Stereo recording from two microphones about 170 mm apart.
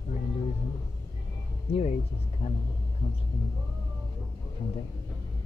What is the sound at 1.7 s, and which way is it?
Speech, 35° left (ahead or behind).